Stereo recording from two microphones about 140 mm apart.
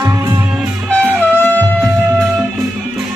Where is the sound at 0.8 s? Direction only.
10° left (ahead or behind).